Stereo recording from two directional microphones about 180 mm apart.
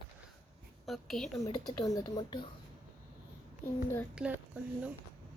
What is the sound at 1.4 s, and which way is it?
Speech, 20° left (ahead or behind).